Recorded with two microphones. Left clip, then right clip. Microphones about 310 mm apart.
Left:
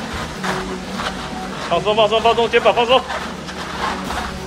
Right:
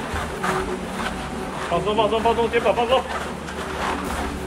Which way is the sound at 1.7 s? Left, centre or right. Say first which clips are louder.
Left 5 dB; left.